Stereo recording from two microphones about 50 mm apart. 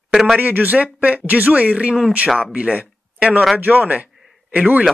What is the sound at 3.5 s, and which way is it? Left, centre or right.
A man's voice, right.